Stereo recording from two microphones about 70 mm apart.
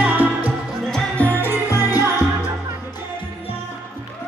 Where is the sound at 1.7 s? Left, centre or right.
Left.